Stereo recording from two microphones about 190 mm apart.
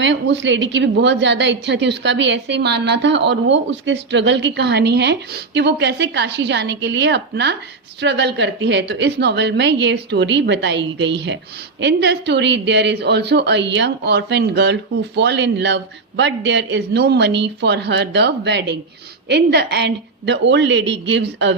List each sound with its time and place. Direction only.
0.0 s a woman's voice: 70° right (ahead or behind)